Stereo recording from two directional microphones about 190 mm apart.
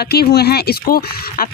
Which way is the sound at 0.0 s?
55° left (ahead or behind).